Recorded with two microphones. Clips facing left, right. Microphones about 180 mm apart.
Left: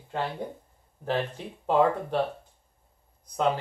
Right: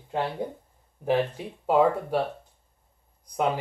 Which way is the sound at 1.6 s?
10° right (ahead or behind).